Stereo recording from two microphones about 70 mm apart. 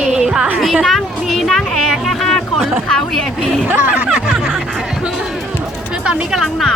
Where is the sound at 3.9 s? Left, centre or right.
Centre.